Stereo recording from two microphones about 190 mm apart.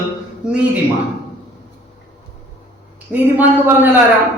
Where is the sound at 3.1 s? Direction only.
10° right (ahead or behind).